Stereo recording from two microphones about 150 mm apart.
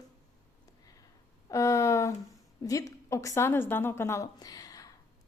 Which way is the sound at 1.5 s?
20° left (ahead or behind).